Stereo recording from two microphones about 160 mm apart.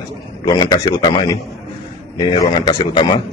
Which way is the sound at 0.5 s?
25° left (ahead or behind).